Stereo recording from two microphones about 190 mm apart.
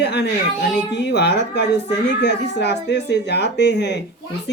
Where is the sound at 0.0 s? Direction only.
60° left (ahead or behind).